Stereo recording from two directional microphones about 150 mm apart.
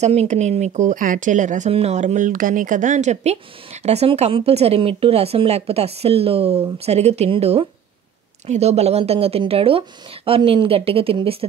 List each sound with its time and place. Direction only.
0.0 s speech: 45° right (ahead or behind)
1.7 s speech: 45° right (ahead or behind)